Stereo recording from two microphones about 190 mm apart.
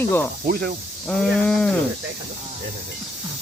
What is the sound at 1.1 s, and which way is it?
Speech, 5° left (ahead or behind).